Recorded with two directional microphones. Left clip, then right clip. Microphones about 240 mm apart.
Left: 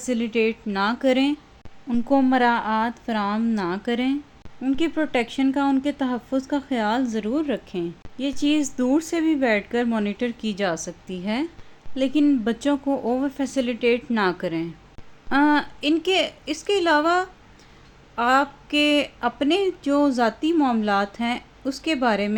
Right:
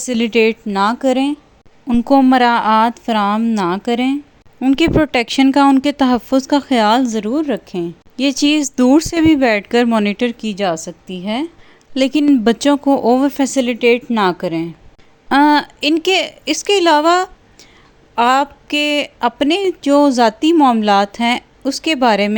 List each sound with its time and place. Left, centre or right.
0.0 s a woman's voice: right; by 1.4 s centre
1.9 s speech: right
4.6 s speech: right
8.2 s speech: right
10.4 s a woman's voice: centre
11.9 s speech: right
15.3 s a woman's voice: right